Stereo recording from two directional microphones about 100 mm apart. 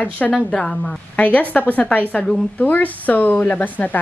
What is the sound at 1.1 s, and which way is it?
A woman's voice, 15° left (ahead or behind).